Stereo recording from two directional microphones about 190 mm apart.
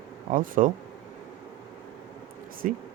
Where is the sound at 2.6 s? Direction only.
45° right (ahead or behind).